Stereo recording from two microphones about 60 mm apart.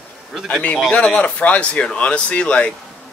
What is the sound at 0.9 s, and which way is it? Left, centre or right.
Speech, centre.